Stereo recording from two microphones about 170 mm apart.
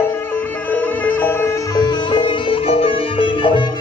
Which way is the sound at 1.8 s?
25° left (ahead or behind).